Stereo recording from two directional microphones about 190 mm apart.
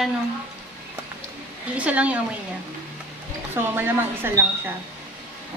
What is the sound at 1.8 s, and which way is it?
Speech, 5° right (ahead or behind).